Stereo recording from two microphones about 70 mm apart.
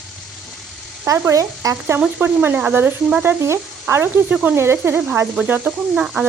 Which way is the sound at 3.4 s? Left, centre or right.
Right.